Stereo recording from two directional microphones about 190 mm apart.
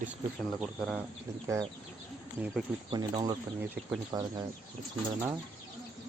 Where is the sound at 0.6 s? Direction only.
5° right (ahead or behind).